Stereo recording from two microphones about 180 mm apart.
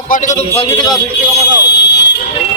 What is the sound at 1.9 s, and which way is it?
Vehicle, 70° left (ahead or behind).